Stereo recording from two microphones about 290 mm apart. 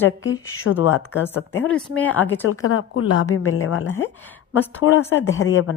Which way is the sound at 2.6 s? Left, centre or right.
Left.